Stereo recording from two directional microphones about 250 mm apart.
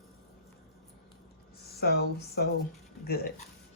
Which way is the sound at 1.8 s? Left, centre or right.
Left.